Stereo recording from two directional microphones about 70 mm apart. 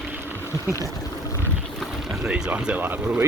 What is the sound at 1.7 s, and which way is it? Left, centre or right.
Speech, centre.